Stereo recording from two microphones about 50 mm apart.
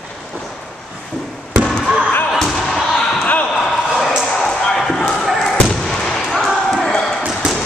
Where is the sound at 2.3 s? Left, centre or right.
Centre.